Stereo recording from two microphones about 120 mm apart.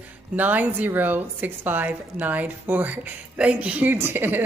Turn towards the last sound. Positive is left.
turn(degrees=-20)  # may be behind; listen again after turning